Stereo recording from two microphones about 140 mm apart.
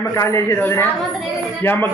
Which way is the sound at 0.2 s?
20° left (ahead or behind).